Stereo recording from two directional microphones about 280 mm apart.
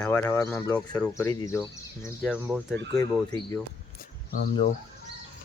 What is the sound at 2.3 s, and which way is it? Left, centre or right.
Speech, centre.